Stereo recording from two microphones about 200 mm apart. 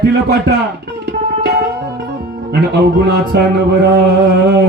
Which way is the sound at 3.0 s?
55° right (ahead or behind).